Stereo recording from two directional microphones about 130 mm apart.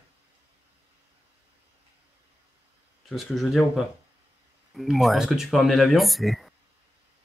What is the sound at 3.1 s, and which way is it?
Speech, centre (ahead or behind).